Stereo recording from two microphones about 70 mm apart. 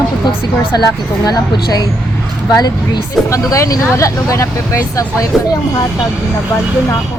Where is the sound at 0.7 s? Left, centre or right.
Left.